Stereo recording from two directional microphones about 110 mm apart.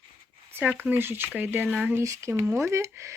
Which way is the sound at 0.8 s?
20° right (ahead or behind).